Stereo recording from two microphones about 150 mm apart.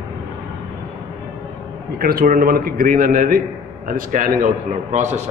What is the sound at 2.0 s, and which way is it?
A man's voice, 80° right.